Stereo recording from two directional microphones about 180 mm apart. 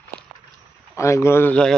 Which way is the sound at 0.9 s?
15° left (ahead or behind).